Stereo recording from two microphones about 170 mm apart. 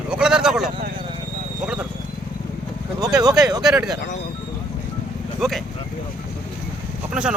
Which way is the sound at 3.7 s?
5° right (ahead or behind).